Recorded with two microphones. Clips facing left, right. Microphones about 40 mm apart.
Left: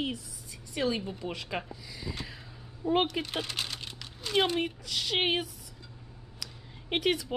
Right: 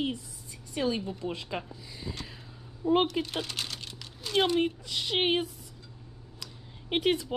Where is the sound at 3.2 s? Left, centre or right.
Centre.